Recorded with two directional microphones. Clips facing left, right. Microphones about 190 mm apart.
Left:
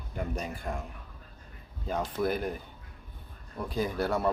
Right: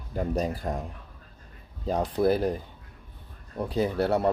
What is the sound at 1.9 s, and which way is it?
Speech, 35° right (ahead or behind).